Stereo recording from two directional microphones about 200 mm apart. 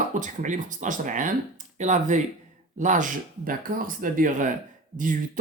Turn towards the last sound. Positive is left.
turn(degrees=-40)  # may be behind; listen again after turning